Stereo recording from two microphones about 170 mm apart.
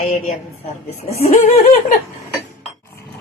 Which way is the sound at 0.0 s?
35° left (ahead or behind).